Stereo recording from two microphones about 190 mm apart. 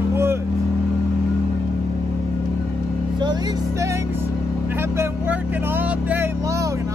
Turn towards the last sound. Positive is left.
turn(degrees=-15)  # may be behind; listen again after turning